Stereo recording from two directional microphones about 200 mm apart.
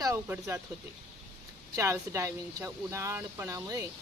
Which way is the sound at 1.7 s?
15° right (ahead or behind).